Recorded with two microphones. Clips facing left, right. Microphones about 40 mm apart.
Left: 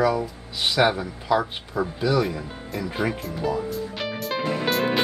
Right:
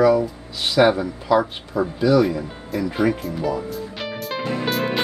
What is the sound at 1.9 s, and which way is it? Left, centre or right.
Music, centre.